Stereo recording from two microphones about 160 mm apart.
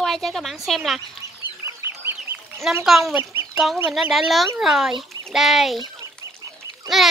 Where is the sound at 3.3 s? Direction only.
5° right (ahead or behind).